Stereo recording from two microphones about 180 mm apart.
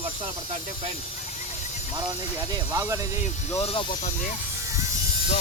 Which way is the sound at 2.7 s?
15° right (ahead or behind).